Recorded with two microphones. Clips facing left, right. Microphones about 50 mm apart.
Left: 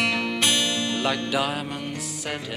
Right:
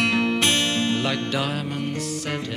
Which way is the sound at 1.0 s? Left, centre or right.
Centre.